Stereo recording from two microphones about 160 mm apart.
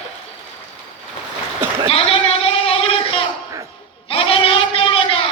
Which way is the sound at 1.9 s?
40° left (ahead or behind).